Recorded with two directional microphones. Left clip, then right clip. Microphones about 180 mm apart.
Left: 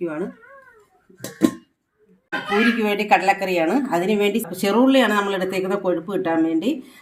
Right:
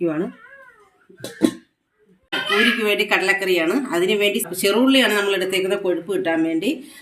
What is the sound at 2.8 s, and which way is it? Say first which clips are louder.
Speech: left 1 dB; 60° left (ahead or behind).